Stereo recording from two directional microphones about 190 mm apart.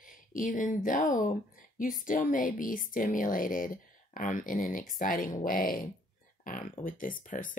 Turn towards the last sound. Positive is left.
turn(degrees=45)  # may be behind; listen again after turning